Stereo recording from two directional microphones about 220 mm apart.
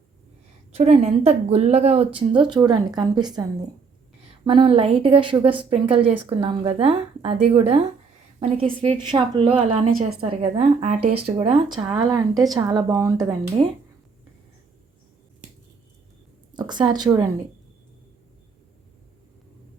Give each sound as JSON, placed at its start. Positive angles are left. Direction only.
{"t": 0.7, "sound": "a woman's voice", "side_deg": -30}
{"t": 4.4, "sound": "a woman's voice", "side_deg": -25}
{"t": 9.9, "sound": "a woman's voice", "side_deg": -40}
{"t": 10.2, "sound": "a woman's voice", "side_deg": -25}
{"t": 16.6, "sound": "a woman's voice", "side_deg": -20}